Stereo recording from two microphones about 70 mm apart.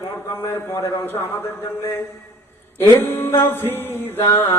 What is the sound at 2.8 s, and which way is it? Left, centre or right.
A man's voice, left.